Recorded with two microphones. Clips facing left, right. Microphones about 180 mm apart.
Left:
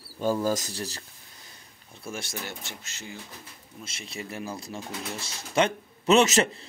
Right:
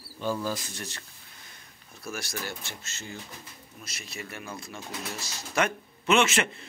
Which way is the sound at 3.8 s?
30° left (ahead or behind).